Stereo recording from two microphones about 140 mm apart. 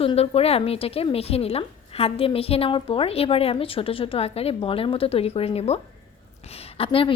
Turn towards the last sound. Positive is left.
turn(degrees=40)  # may be behind; listen again after turning